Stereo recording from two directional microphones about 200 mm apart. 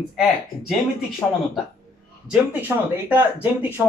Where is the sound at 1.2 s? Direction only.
10° left (ahead or behind).